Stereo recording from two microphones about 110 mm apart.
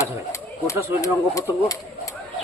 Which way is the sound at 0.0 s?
25° left (ahead or behind).